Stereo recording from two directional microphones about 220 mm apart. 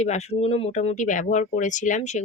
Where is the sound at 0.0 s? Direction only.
30° left (ahead or behind).